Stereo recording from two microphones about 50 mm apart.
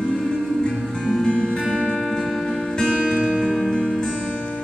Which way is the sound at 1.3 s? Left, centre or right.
Left.